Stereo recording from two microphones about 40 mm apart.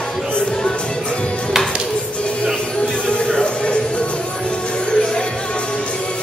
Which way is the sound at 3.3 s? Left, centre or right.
Left.